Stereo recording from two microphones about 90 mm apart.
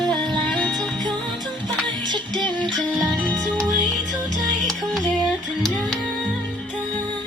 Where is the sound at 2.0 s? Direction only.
55° right (ahead or behind).